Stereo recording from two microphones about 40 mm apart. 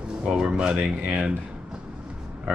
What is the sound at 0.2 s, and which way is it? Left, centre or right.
Speech, centre.